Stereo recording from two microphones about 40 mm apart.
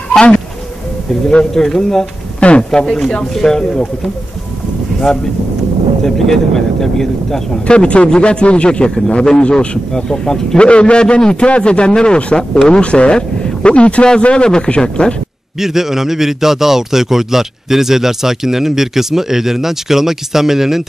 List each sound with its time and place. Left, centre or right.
1.5 s speech: centre
7.6 s a man's voice: left
10.6 s a man's voice: left
15.6 s a man's voice: centre